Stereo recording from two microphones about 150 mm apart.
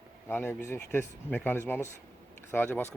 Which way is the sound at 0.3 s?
15° left (ahead or behind).